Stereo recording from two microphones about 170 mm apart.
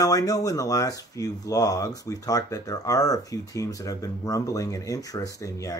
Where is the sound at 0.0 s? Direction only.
20° left (ahead or behind).